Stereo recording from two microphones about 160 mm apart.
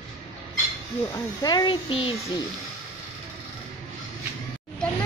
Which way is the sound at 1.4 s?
25° left (ahead or behind).